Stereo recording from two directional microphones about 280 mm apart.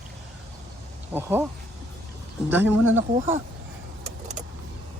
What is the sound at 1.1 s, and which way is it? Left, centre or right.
Speech, centre.